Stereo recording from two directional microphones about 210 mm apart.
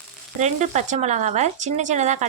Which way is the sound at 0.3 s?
35° right (ahead or behind).